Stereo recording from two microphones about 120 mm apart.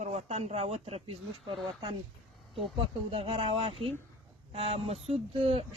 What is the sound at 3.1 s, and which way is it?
Speech, 50° right (ahead or behind).